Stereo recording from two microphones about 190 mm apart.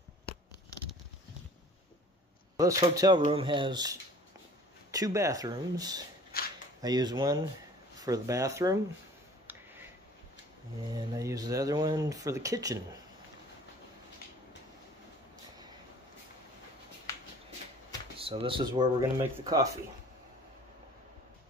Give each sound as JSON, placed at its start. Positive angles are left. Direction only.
{"t": 2.5, "sound": "speech", "side_deg": -20}
{"t": 6.3, "sound": "a sound", "side_deg": 55}
{"t": 6.8, "sound": "speech", "side_deg": -20}
{"t": 9.5, "sound": "a sound", "side_deg": -10}
{"t": 10.9, "sound": "speech", "side_deg": -20}
{"t": 18.1, "sound": "speech", "side_deg": -30}